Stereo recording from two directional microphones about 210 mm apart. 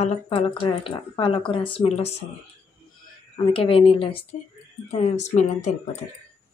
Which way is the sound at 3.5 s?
25° left (ahead or behind).